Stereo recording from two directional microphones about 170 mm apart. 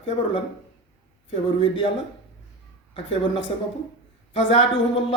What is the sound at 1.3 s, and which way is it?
Speech, 30° left (ahead or behind).